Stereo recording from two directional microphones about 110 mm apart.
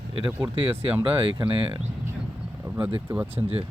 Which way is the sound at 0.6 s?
60° right (ahead or behind).